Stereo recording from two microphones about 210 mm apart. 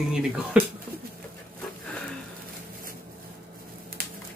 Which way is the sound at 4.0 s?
45° right (ahead or behind).